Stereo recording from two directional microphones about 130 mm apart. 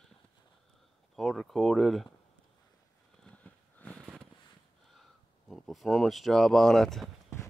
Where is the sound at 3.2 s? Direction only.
10° left (ahead or behind).